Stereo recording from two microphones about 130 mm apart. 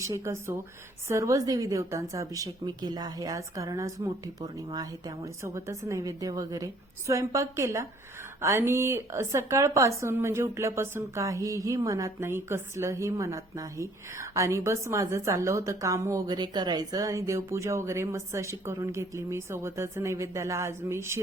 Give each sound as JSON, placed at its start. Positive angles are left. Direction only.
{"t": 0.0, "sound": "speech", "side_deg": -20}